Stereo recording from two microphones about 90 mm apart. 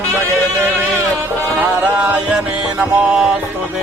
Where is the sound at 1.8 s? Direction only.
15° right (ahead or behind).